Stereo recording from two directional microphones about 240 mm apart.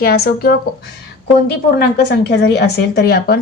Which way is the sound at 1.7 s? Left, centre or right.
Left.